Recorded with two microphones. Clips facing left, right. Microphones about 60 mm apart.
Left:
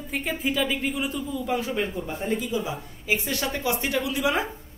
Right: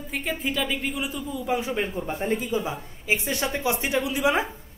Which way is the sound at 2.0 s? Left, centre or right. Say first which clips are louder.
Right 1 dB; right.